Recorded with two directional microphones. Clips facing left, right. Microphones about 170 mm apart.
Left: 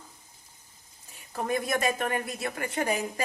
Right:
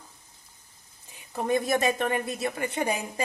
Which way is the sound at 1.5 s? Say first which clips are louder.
Right 3 dB; 20° right (ahead or behind).